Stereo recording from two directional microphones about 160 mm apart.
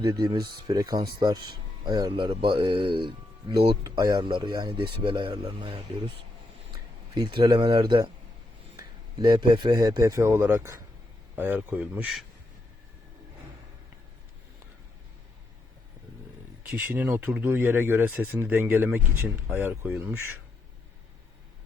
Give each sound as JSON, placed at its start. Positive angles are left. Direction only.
{"t": 0.0, "sound": "speech", "side_deg": -30}
{"t": 16.8, "sound": "speech", "side_deg": -10}